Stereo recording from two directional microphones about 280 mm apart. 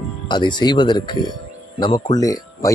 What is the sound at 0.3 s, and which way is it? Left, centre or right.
Speech, centre.